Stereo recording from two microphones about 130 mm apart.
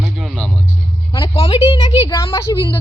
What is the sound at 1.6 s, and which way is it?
Speech, 45° left (ahead or behind).